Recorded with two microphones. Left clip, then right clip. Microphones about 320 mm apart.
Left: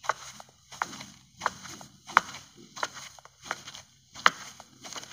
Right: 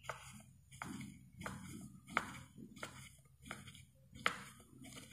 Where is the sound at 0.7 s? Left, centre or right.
Left.